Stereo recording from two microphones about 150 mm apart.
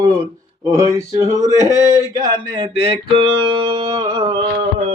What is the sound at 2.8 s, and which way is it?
Music, 35° right (ahead or behind).